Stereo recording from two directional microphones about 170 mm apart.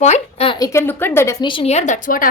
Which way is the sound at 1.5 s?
35° left (ahead or behind).